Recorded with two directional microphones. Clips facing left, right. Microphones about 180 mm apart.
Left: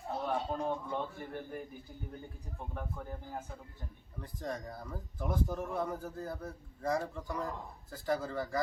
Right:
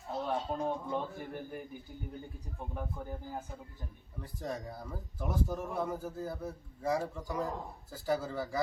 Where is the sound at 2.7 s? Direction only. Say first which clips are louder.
Right 2 dB; 15° right (ahead or behind).